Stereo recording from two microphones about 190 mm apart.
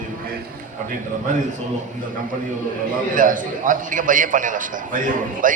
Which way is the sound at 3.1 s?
45° right (ahead or behind).